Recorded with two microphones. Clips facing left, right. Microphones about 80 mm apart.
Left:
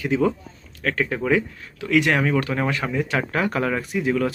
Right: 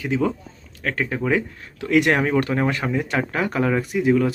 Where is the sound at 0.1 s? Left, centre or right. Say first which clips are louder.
Left 1 dB; centre.